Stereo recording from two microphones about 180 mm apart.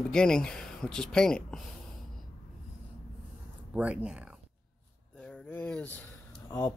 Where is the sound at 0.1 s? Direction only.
5° left (ahead or behind).